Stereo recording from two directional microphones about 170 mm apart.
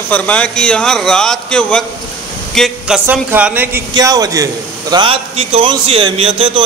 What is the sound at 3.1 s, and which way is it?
Speech, 10° right (ahead or behind).